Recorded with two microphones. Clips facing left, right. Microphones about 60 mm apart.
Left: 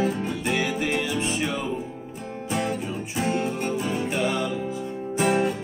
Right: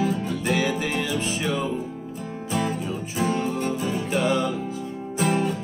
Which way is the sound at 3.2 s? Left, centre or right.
Left.